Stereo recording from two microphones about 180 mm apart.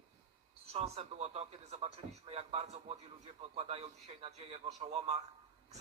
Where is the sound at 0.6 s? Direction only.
35° right (ahead or behind).